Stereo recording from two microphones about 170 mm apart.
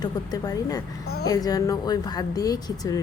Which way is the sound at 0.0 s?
25° left (ahead or behind).